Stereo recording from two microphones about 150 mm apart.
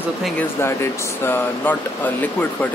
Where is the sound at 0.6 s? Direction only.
15° left (ahead or behind).